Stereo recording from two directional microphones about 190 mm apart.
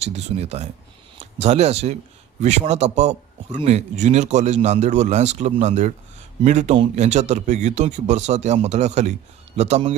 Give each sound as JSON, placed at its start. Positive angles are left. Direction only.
{"t": 0.0, "sound": "a man's voice", "side_deg": -35}